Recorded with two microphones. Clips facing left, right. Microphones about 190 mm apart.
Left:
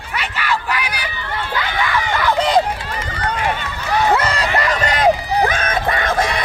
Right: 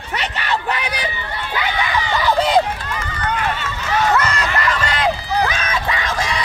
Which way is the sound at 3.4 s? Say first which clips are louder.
Left 1 dB; 15° left (ahead or behind).